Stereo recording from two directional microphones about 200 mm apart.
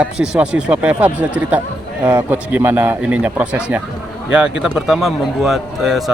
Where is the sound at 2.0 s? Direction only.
20° right (ahead or behind); by 6.0 s centre (ahead or behind).